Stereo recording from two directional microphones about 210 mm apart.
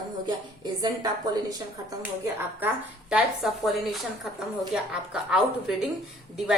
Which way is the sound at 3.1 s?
Centre (ahead or behind).